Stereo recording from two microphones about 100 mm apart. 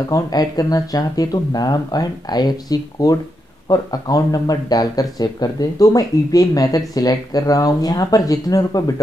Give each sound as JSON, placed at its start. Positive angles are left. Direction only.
{"t": 0.1, "sound": "speech", "side_deg": 40}